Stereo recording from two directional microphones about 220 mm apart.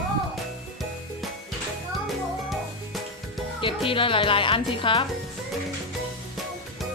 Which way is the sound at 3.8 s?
25° left (ahead or behind).